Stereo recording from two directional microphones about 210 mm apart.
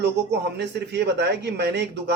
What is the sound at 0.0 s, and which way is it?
Speech, 50° right (ahead or behind).